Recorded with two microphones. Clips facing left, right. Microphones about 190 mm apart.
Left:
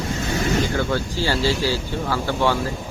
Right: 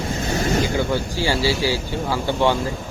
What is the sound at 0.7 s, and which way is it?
Speech, 15° right (ahead or behind).